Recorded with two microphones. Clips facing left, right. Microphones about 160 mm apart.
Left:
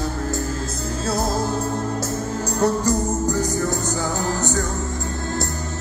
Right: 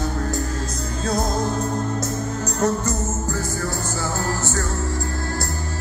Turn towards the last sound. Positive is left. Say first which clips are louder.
# left 2 dB
turn(degrees=20)  # may be behind; listen again after turning